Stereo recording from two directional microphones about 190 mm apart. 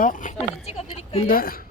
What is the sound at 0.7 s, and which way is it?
Speech, 35° left (ahead or behind).